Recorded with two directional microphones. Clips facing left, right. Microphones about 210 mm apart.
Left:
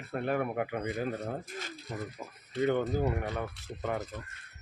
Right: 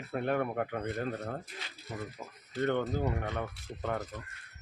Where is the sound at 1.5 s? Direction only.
45° left (ahead or behind).